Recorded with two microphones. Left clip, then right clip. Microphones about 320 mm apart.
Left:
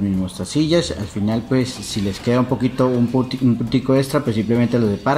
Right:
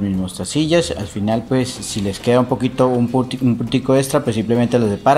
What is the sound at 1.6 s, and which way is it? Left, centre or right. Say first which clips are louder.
Speech: right 1 dB; right.